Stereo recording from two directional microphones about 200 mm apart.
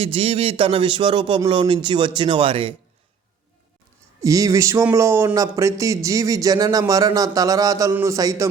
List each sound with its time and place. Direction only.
0.0 s a man's voice: 30° right (ahead or behind)
4.2 s speech: 15° right (ahead or behind)